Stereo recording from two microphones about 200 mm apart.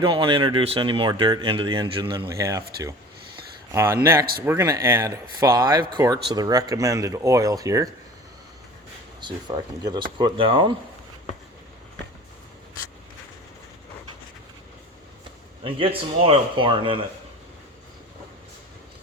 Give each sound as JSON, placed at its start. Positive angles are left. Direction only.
{"t": 0.0, "sound": "speech", "side_deg": -25}
{"t": 3.7, "sound": "speech", "side_deg": -15}
{"t": 9.2, "sound": "speech", "side_deg": -20}
{"t": 15.6, "sound": "speech", "side_deg": -25}